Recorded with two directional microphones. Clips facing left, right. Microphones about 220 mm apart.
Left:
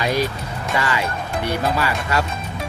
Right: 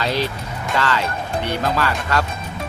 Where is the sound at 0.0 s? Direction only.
10° left (ahead or behind).